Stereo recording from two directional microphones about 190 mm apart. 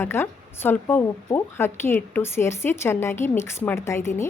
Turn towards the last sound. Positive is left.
turn(degrees=15)  # may be behind; listen again after turning